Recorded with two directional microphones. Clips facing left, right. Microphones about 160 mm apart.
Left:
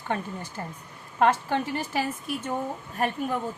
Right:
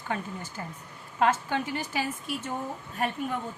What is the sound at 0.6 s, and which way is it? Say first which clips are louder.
Speech: left 3 dB; 40° left (ahead or behind).